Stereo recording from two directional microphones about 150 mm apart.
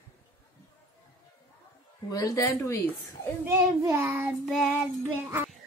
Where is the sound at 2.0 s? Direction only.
25° left (ahead or behind).